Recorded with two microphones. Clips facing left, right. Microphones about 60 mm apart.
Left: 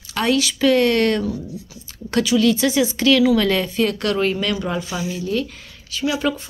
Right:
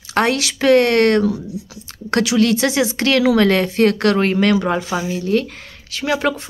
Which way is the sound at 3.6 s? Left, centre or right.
Right.